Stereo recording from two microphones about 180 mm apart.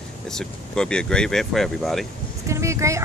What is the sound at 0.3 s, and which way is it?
Speech, 5° left (ahead or behind).